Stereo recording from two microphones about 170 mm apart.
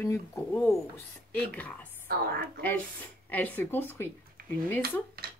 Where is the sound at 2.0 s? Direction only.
65° right (ahead or behind).